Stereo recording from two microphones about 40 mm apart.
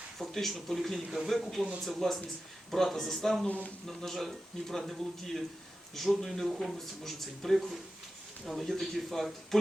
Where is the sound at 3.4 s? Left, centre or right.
Left.